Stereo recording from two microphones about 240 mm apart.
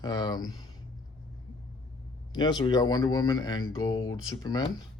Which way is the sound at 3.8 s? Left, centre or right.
Left.